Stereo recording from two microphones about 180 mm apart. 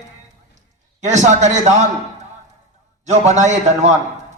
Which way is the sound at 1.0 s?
40° right (ahead or behind).